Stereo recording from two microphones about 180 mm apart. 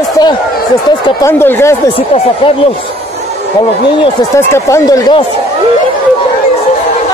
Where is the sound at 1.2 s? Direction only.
15° left (ahead or behind).